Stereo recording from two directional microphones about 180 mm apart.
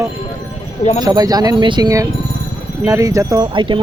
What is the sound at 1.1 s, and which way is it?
Speech, 20° right (ahead or behind).